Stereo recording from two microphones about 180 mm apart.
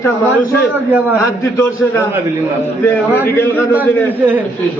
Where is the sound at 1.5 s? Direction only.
15° left (ahead or behind).